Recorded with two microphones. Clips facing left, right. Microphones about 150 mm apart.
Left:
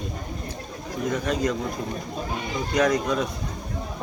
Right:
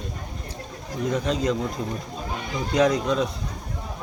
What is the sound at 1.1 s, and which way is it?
Speech, 30° right (ahead or behind).